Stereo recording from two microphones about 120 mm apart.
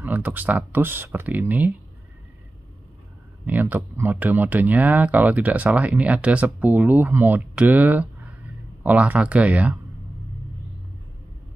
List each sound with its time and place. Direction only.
0.1 s speech: 15° right (ahead or behind)
3.4 s speech: 15° right (ahead or behind)